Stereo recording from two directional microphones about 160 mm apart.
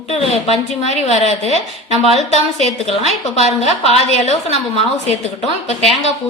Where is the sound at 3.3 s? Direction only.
40° left (ahead or behind).